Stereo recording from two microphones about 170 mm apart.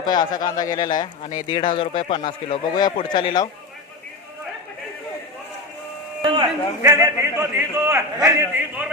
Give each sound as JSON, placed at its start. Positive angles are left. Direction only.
{"t": 0.0, "sound": "a man's voice", "side_deg": 25}
{"t": 1.2, "sound": "speech", "side_deg": 45}
{"t": 1.5, "sound": "a man's voice", "side_deg": 30}
{"t": 6.2, "sound": "a man's voice", "side_deg": -25}
{"t": 6.8, "sound": "a man's voice", "side_deg": -15}